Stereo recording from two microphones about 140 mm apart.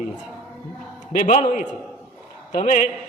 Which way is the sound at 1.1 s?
65° left (ahead or behind).